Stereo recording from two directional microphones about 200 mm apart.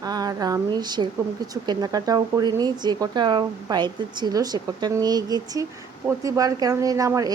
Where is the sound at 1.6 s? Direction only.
20° right (ahead or behind).